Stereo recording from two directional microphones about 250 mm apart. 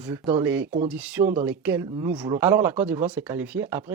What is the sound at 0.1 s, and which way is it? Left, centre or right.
Speech, centre.